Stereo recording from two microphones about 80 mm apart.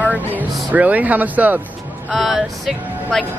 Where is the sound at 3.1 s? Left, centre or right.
Centre.